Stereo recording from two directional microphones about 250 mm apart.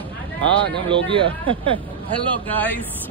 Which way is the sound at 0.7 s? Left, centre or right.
Right.